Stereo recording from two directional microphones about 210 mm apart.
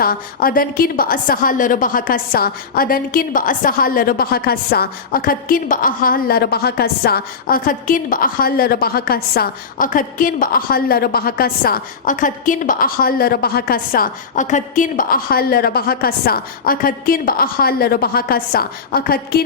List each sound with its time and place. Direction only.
0.0 s a woman's voice: 45° left (ahead or behind)